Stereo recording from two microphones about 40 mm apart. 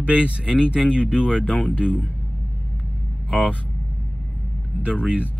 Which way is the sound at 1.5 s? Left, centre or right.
Left.